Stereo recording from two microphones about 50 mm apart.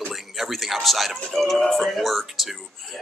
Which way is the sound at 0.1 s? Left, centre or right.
Centre.